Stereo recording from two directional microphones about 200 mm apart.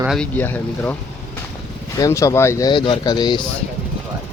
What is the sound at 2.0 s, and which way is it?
Speech, 15° left (ahead or behind).